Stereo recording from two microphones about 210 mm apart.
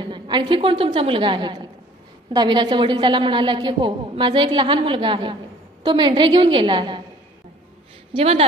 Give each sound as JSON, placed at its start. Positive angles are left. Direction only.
{"t": 0.0, "sound": "a woman's voice", "side_deg": -20}
{"t": 8.1, "sound": "a woman's voice", "side_deg": -30}